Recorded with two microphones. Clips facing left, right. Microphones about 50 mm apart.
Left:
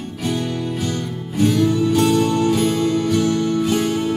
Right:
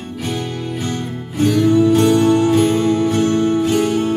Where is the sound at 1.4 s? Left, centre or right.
Right.